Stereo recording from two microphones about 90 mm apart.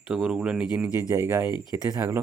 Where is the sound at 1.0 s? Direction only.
30° right (ahead or behind).